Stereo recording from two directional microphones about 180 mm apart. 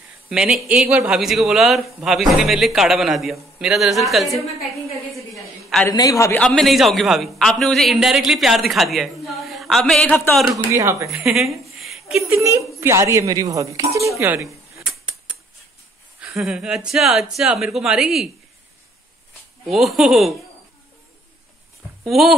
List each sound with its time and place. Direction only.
0.3 s a man's voice: centre (ahead or behind)
5.1 s a sound: centre (ahead or behind)
5.9 s a woman's voice: 20° left (ahead or behind)
6.4 s a man's voice: 5° left (ahead or behind)
10.5 s speech: 15° right (ahead or behind)
11.1 s a woman's voice: centre (ahead or behind)
12.4 s speech: 15° right (ahead or behind)
14.9 s mechanisms: 5° right (ahead or behind)
16.2 s a man's voice: centre (ahead or behind)
19.6 s a man's voice: centre (ahead or behind)
22.0 s speech: centre (ahead or behind)